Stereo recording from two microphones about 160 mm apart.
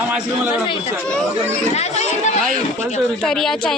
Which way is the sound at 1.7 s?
45° left (ahead or behind).